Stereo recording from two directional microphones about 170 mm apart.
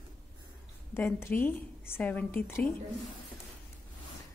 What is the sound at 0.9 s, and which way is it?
A woman's voice, 15° left (ahead or behind).